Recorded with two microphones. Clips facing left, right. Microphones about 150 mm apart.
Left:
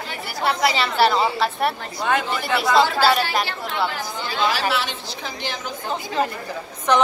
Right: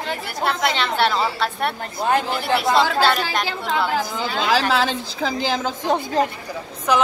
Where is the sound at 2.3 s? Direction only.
Centre (ahead or behind).